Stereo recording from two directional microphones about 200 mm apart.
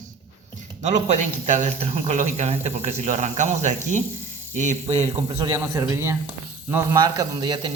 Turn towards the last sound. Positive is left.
turn(degrees=-20)  # may be behind; listen again after turning